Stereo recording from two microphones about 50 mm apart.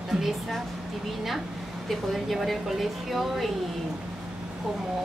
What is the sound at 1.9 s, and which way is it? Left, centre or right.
A woman's voice, centre.